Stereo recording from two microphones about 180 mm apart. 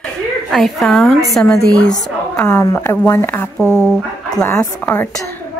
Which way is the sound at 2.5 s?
20° left (ahead or behind).